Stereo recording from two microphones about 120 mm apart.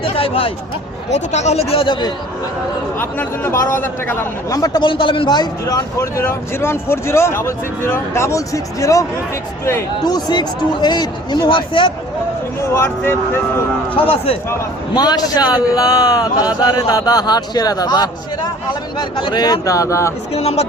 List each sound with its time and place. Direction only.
0.0 s speech: 50° left (ahead or behind)
1.1 s speech: 70° left (ahead or behind); by 2.1 s 40° left (ahead or behind)
3.0 s a man's voice: 20° left (ahead or behind)
4.5 s a man's voice: 30° left (ahead or behind)
12.7 s a man's voice: 20° left (ahead or behind)
13.9 s speech: 50° left (ahead or behind)
14.9 s a man's voice: 35° left (ahead or behind)
20.3 s speech: 60° left (ahead or behind)